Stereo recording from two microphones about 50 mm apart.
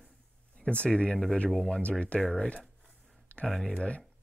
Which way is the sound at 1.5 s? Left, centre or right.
Centre.